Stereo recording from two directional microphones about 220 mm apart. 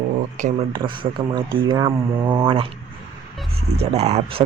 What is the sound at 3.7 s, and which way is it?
Speech, 30° right (ahead or behind).